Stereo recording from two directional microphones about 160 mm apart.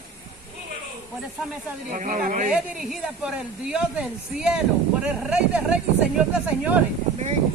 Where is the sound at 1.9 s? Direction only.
55° right (ahead or behind).